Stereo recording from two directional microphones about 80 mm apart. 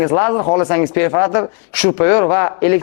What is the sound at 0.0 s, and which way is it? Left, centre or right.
Speech, left.